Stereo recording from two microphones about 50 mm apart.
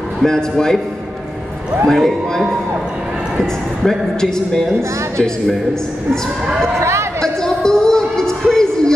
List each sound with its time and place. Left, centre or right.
0.2 s speech: centre
1.9 s a man's voice: centre
6.8 s a sound: right
7.4 s music: centre